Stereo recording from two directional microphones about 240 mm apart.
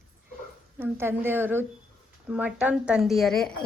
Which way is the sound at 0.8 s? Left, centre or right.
Centre.